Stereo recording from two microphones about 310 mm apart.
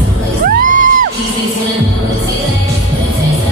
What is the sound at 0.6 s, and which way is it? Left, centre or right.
Music, right.